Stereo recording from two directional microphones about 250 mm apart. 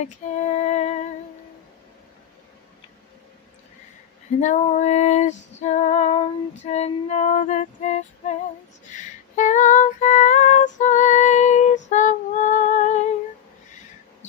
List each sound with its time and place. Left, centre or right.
0.0 s female singing: left
4.4 s female singing: left